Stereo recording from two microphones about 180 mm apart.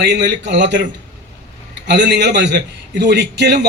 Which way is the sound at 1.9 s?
75° right (ahead or behind).